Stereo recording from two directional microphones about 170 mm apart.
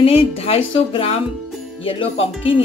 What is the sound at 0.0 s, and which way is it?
Speech, 35° left (ahead or behind).